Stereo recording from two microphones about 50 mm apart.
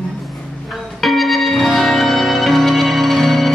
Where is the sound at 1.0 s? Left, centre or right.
Centre.